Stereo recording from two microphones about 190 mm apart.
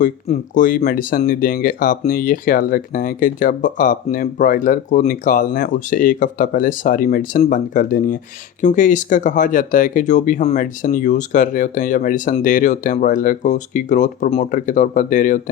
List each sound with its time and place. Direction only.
0.0 s speech: 45° left (ahead or behind)